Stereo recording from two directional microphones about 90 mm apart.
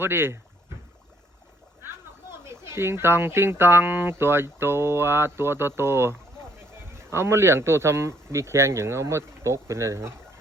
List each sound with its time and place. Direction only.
0.0 s speech: 25° right (ahead or behind)
2.4 s speech: 30° right (ahead or behind)